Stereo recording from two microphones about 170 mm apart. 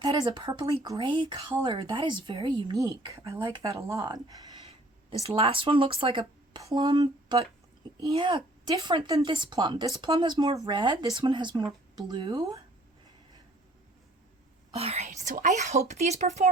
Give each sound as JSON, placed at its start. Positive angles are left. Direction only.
{"t": 0.0, "sound": "speech", "side_deg": -25}
{"t": 5.2, "sound": "speech", "side_deg": -35}
{"t": 6.6, "sound": "speech", "side_deg": -20}
{"t": 14.8, "sound": "speech", "side_deg": -35}